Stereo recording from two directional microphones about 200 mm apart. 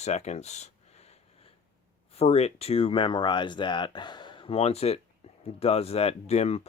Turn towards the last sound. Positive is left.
turn(degrees=30)  # may be behind; listen again after turning